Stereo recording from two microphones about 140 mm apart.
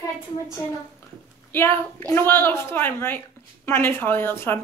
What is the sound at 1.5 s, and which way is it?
A woman's voice, 15° left (ahead or behind).